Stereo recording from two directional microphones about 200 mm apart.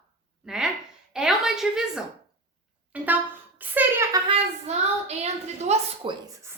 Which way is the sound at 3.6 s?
10° right (ahead or behind).